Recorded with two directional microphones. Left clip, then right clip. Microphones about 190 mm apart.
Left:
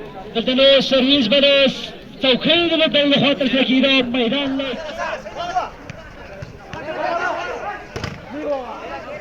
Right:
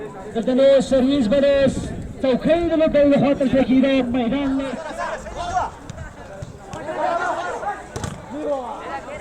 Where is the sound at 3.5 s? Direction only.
20° right (ahead or behind).